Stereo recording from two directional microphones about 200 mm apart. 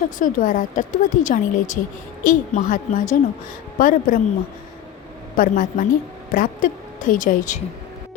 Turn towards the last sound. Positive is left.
turn(degrees=40)  # may be behind; listen again after turning